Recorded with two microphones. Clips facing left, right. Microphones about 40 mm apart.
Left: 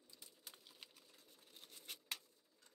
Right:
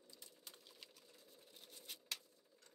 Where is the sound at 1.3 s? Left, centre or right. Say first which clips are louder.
Even; left.